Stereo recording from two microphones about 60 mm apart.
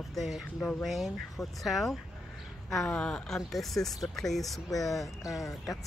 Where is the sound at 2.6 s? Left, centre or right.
Centre.